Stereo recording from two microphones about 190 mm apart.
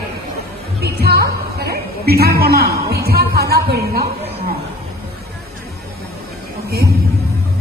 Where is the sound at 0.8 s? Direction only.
55° right (ahead or behind).